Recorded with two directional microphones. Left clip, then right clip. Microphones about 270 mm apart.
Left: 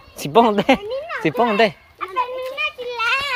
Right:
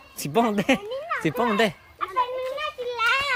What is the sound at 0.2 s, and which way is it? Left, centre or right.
Speech, centre.